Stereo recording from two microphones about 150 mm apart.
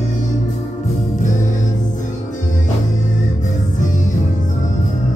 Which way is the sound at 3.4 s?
55° left (ahead or behind).